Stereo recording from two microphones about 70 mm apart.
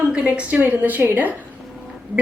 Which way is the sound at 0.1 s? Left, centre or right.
Centre.